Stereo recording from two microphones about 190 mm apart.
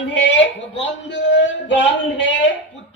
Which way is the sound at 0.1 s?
65° left (ahead or behind).